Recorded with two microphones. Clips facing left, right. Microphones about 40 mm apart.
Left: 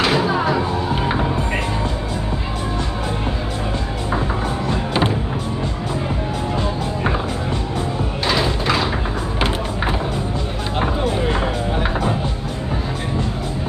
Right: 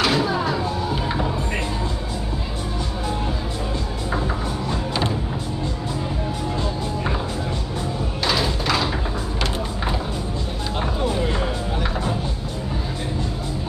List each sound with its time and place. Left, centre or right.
0.0 s music: left
4.6 s music: left
8.3 s a sound: centre
10.8 s music: left